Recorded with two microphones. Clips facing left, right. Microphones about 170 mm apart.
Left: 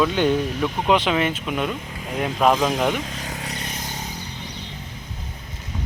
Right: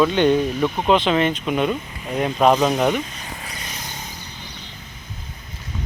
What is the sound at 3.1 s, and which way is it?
Vehicle, 75° left (ahead or behind).